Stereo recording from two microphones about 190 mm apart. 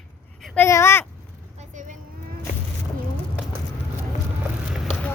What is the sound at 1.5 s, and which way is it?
Vehicle, 40° right (ahead or behind).